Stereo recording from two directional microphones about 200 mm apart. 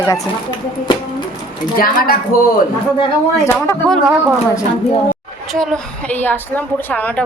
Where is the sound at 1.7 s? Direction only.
45° left (ahead or behind).